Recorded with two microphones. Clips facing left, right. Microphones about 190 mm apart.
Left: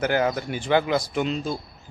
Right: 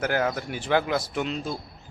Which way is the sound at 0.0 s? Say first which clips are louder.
Left 3 dB; centre (ahead or behind).